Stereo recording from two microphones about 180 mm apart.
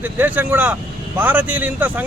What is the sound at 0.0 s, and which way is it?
Speech, 10° right (ahead or behind).